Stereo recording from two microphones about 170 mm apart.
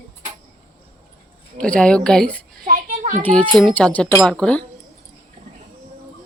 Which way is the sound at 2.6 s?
50° right (ahead or behind).